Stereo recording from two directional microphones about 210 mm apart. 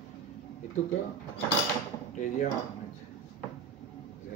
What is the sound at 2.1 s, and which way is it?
Speech, 40° left (ahead or behind).